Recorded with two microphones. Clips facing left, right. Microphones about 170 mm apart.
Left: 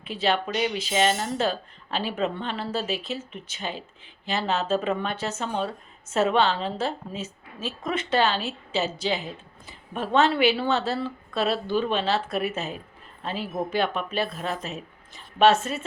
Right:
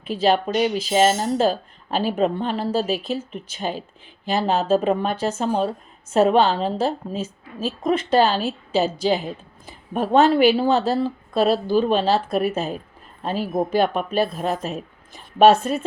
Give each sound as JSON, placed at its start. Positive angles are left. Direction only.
{"t": 0.1, "sound": "a woman's voice", "side_deg": -40}